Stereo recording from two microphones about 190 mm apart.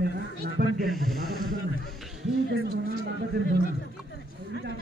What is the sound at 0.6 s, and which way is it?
Speech, 50° right (ahead or behind).